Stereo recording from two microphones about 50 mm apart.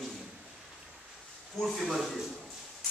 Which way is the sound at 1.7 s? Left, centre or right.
Centre.